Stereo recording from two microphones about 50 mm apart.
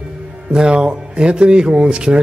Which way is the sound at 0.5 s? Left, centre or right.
Centre.